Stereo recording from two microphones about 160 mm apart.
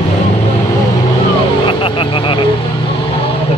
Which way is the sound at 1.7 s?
30° left (ahead or behind).